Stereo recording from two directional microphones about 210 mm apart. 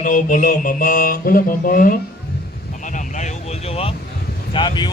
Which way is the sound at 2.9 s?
35° left (ahead or behind).